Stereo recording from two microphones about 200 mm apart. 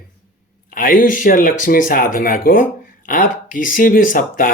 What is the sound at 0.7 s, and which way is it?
Speech, 45° left (ahead or behind).